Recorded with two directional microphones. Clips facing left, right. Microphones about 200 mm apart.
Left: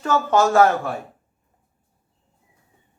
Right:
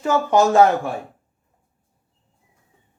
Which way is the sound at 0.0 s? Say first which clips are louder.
Right 2 dB; 15° right (ahead or behind).